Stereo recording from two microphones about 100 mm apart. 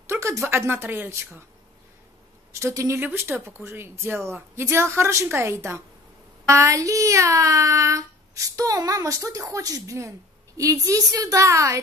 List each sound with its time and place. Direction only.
0.1 s speech: 30° right (ahead or behind)
2.5 s speech: 30° right (ahead or behind)